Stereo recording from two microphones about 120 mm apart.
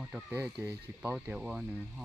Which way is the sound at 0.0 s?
10° right (ahead or behind).